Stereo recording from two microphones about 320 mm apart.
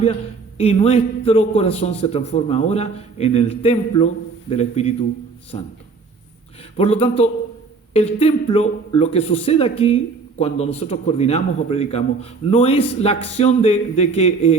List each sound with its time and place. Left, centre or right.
0.5 s a man's voice: centre
6.7 s speech: centre